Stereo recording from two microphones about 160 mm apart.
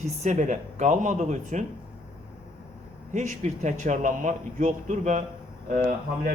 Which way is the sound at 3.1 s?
50° right (ahead or behind).